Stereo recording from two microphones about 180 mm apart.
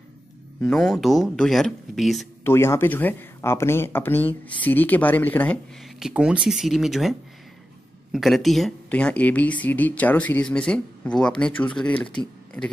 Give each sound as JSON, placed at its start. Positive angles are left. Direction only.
{"t": 0.7, "sound": "speech", "side_deg": 0}
{"t": 2.4, "sound": "speech", "side_deg": 15}
{"t": 5.9, "sound": "speech", "side_deg": -5}